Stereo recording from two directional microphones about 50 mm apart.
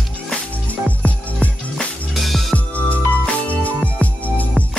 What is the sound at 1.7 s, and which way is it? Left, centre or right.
Music, centre.